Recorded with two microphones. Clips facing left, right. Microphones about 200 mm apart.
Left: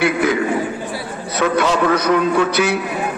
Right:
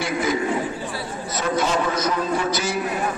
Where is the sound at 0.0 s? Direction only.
65° left (ahead or behind).